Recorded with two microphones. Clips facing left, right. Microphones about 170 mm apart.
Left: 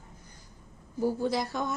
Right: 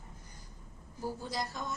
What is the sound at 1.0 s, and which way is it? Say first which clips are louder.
Speech: left 9 dB; 70° left (ahead or behind).